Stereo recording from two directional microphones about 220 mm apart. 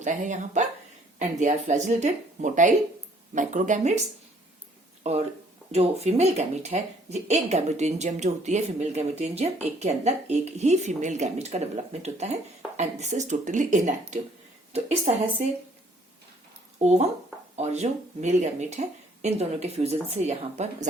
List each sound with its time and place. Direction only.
0.0 s speech: 35° right (ahead or behind)
5.0 s speech: 30° right (ahead or behind)
16.7 s speech: 30° right (ahead or behind)